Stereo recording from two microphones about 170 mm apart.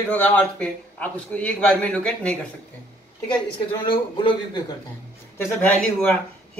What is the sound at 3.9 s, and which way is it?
Speech, 30° left (ahead or behind).